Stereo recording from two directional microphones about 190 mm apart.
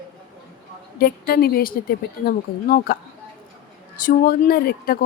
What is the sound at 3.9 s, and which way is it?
A woman's voice, 50° left (ahead or behind).